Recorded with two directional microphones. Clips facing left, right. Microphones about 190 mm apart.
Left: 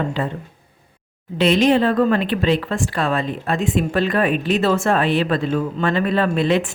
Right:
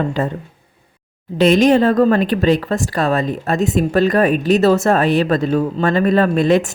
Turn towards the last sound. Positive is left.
turn(degrees=-45)  # may be behind; listen again after turning